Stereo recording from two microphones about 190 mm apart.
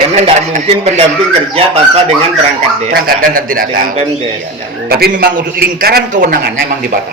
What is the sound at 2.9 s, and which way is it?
A man's voice, 55° right (ahead or behind).